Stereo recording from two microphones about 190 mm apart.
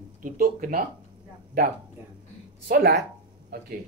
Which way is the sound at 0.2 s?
45° right (ahead or behind).